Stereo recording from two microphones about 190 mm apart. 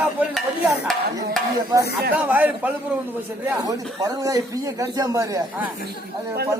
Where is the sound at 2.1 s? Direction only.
10° right (ahead or behind).